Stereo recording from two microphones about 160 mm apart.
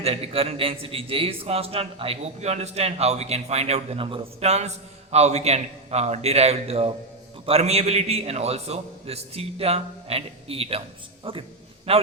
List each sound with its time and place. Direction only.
0.0 s a man's voice: 40° right (ahead or behind)